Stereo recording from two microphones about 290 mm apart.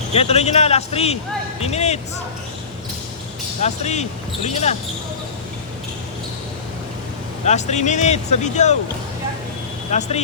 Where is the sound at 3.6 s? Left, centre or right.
Left.